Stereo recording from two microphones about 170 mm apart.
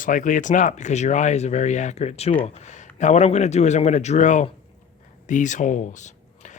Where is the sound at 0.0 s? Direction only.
50° left (ahead or behind).